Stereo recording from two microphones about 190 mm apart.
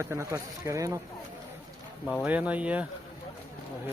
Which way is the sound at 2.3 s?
5° right (ahead or behind).